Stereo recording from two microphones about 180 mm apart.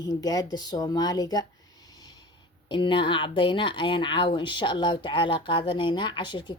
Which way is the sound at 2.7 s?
25° left (ahead or behind).